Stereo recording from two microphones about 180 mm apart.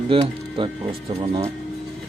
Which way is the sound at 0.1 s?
30° right (ahead or behind).